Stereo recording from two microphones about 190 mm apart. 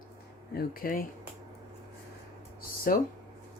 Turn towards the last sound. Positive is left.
turn(degrees=45)  # may be behind; listen again after turning